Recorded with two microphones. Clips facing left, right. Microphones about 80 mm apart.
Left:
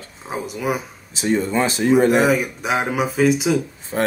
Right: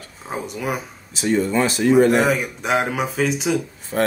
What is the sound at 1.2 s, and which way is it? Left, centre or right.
Speech, left.